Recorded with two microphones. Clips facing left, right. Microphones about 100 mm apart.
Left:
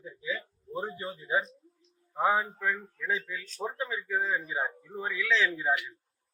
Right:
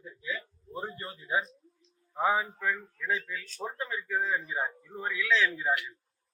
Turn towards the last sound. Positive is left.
turn(degrees=5)  # may be behind; listen again after turning